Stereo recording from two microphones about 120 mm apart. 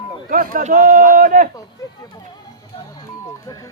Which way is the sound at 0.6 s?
90° right.